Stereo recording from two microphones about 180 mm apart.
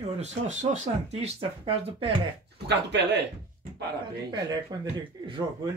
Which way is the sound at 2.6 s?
70° right (ahead or behind).